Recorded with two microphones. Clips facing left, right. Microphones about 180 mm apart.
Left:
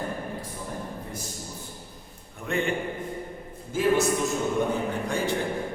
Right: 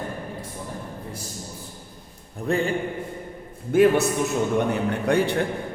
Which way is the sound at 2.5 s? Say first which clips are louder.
Right 5 dB; 35° right (ahead or behind).